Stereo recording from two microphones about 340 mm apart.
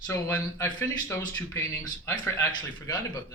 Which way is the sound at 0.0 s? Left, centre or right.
Centre.